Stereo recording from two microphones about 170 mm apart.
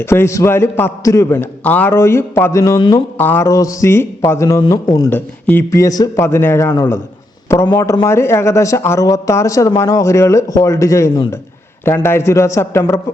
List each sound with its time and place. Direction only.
0.0 s a man's voice: 15° left (ahead or behind)
5.1 s a man's voice: 10° left (ahead or behind)